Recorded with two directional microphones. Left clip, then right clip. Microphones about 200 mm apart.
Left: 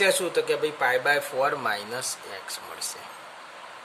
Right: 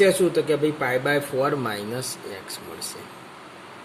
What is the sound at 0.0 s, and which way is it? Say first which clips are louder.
A man's voice: right 4 dB; 10° left (ahead or behind).